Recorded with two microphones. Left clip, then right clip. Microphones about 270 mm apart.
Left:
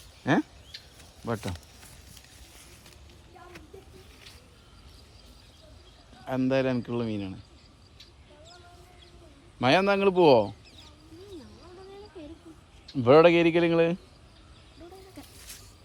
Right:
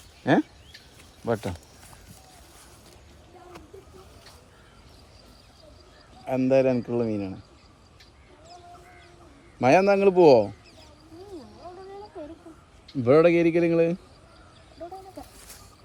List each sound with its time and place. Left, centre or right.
0.2 s a man's voice: centre
6.5 s a man's voice: centre
6.7 s speech: centre
7.0 s a man's voice: centre
9.6 s a man's voice: centre
10.1 s speech: centre
13.0 s speech: centre
13.3 s speech: centre